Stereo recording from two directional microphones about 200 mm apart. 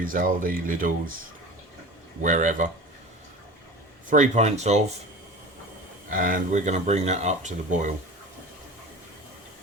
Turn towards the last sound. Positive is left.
turn(degrees=-40)  # may be behind; listen again after turning